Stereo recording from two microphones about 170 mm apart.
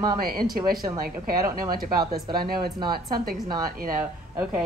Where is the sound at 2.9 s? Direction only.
60° right (ahead or behind).